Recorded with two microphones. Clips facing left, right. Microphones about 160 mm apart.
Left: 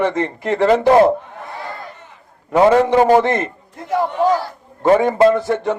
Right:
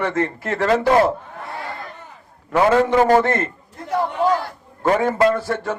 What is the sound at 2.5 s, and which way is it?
Speech, 20° left (ahead or behind).